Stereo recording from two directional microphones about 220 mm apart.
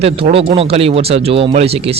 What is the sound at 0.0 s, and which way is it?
Speech, 25° right (ahead or behind).